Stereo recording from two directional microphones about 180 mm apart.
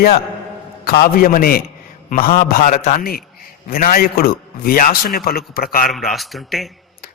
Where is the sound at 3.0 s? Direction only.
55° left (ahead or behind).